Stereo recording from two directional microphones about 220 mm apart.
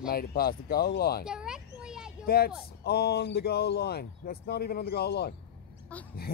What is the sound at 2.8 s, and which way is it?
Speech, 45° left (ahead or behind).